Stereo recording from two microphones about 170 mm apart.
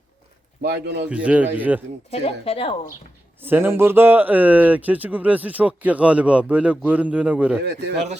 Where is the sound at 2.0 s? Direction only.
35° left (ahead or behind).